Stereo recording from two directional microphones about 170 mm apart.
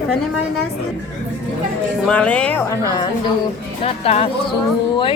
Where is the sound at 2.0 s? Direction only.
5° left (ahead or behind).